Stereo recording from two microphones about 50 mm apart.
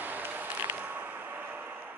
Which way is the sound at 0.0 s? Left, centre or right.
Right.